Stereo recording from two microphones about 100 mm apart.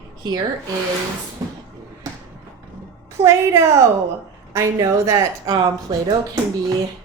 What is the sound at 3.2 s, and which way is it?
A woman's voice, 30° right (ahead or behind).